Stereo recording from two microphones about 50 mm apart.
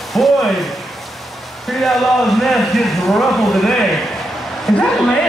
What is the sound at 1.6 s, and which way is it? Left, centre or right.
Speech, centre.